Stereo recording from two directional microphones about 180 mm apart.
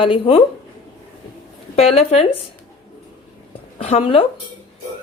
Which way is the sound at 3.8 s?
35° left (ahead or behind).